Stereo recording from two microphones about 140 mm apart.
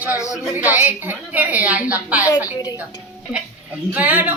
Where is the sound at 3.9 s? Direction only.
10° right (ahead or behind).